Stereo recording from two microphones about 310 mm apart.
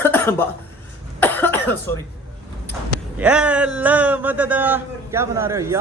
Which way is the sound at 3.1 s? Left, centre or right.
Centre.